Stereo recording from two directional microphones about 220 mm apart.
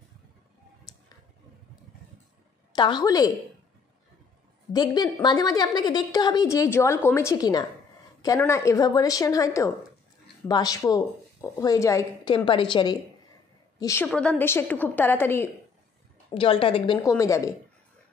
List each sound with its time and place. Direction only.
2.7 s a woman's voice: 20° left (ahead or behind)
4.7 s a woman's voice: 20° left (ahead or behind)
16.3 s a woman's voice: 25° left (ahead or behind)